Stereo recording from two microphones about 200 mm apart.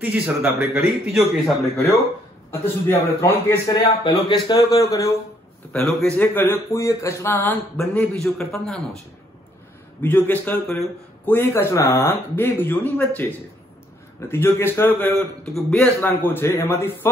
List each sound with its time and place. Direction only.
0.0 s a man's voice: 10° right (ahead or behind)
2.5 s a man's voice: 10° left (ahead or behind)
3.7 s a man's voice: 25° left (ahead or behind); by 8.8 s centre (ahead or behind)
10.0 s a man's voice: 10° left (ahead or behind)